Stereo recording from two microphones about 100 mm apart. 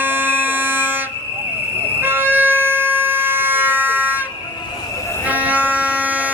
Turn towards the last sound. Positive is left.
turn(degrees=-15)  # may be behind; listen again after turning